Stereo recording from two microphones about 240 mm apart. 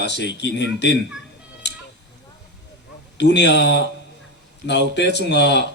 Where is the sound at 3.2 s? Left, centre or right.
Left.